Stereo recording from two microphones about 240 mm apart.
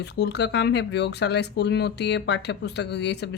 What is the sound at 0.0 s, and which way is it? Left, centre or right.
A woman's voice, left.